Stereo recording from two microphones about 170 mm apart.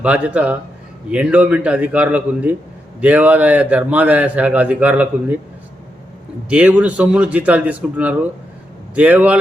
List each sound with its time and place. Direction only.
0.0 s a man's voice: 10° right (ahead or behind)
6.5 s a man's voice: 5° right (ahead or behind)